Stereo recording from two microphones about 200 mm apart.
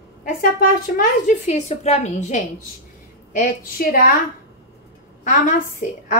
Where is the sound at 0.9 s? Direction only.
40° left (ahead or behind).